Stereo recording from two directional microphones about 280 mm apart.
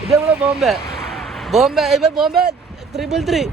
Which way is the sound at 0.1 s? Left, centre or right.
Centre.